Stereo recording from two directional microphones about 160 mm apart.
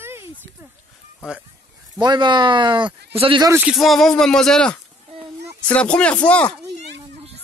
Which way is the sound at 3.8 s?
Centre (ahead or behind).